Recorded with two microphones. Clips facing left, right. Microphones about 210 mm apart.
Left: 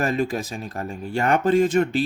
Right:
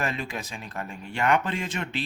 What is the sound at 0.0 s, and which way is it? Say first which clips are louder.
Speech: left 8 dB; 45° left (ahead or behind).